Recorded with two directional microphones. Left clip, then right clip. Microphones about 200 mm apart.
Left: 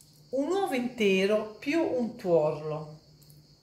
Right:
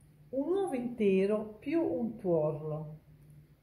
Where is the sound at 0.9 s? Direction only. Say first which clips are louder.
Left 3 dB; 5° right (ahead or behind).